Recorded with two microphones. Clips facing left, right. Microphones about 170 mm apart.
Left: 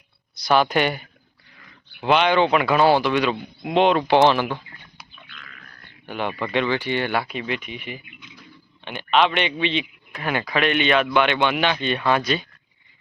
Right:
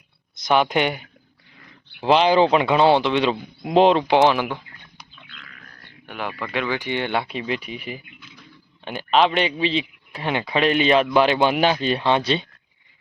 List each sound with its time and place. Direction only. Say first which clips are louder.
0.3 s speech: even; 20° right (ahead or behind)
2.0 s speech: right 2 dB; 30° right (ahead or behind)
3.3 s speech: even; 5° left (ahead or behind)
3.9 s speech: even; 15° right (ahead or behind)
6.1 s speech: left 3 dB; centre (ahead or behind)
6.7 s a man's voice: left 1 dB; 15° right (ahead or behind)